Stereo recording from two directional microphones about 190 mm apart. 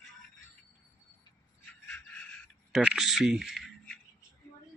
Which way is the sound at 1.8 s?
5° left (ahead or behind).